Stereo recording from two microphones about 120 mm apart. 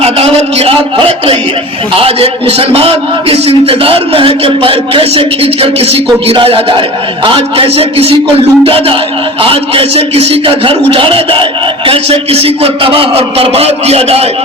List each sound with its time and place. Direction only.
0.0 s a man's voice: 55° right (ahead or behind)